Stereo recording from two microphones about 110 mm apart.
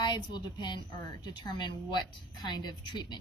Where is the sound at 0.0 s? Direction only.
45° left (ahead or behind).